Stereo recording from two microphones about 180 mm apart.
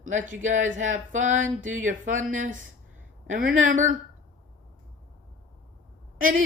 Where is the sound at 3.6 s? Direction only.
45° right (ahead or behind).